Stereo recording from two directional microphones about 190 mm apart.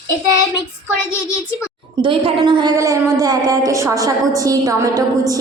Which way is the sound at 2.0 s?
25° right (ahead or behind).